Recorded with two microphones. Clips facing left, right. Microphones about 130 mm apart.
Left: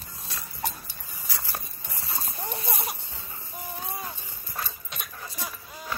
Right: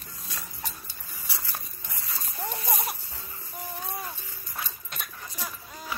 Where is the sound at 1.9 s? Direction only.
30° left (ahead or behind).